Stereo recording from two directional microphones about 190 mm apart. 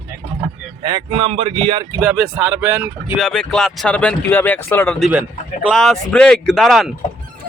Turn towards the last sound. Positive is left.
turn(degrees=0)  # may be behind; listen again after turning